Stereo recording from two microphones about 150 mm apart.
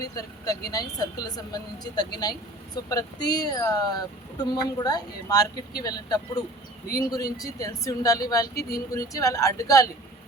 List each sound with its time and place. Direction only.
0.0 s speech: 25° left (ahead or behind)